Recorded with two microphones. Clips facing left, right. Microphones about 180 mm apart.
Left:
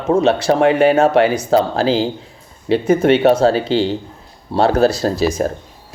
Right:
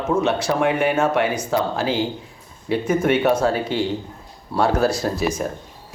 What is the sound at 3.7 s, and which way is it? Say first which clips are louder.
Speech: left 6 dB; 90° left.